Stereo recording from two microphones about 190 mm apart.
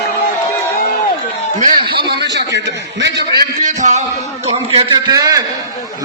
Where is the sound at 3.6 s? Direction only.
40° right (ahead or behind).